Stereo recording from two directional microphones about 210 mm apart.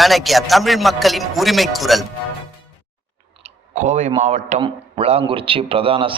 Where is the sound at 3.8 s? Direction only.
35° right (ahead or behind).